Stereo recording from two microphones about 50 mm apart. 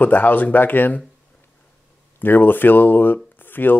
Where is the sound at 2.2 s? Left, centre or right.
Left.